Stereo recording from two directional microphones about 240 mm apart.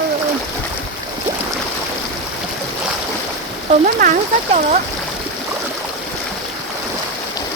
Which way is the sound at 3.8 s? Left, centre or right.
Right.